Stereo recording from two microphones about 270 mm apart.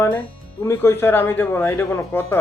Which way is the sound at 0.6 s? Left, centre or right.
Centre.